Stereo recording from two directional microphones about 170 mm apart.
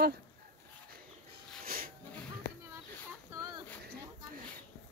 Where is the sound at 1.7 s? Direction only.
60° right (ahead or behind).